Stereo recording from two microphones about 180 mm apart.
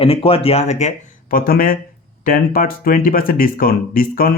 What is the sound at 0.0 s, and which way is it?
Speech, 30° left (ahead or behind).